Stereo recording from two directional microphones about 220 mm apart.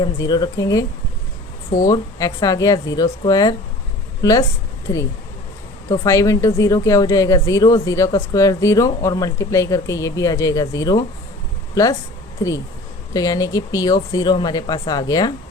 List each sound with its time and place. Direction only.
0.0 s speech: 20° left (ahead or behind)